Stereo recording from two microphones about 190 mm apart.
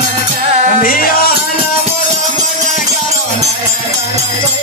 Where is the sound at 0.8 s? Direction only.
50° left (ahead or behind).